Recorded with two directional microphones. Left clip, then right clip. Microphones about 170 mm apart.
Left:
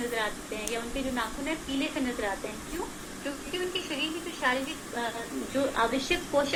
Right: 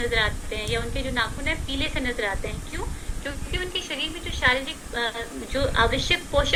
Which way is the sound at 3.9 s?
15° right (ahead or behind).